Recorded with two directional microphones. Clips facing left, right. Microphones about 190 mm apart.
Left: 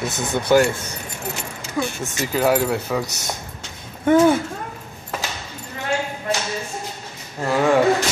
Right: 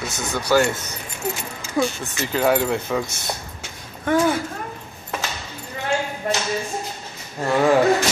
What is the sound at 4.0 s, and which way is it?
Speech, 20° left (ahead or behind).